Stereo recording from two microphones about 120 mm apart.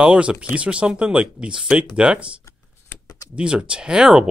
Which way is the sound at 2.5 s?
25° left (ahead or behind).